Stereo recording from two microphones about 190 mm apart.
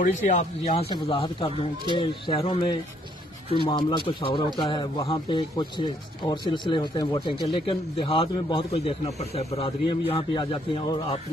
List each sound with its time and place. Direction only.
0.0 s speech: 40° left (ahead or behind)
0.9 s a man's voice: 25° left (ahead or behind)